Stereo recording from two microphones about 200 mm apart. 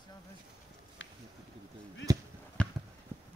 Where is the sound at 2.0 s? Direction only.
65° left (ahead or behind).